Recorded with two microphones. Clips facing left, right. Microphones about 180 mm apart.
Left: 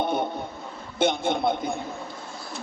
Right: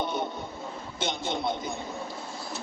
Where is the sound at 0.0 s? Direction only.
55° left (ahead or behind).